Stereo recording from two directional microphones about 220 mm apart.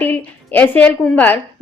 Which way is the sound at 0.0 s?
5° left (ahead or behind).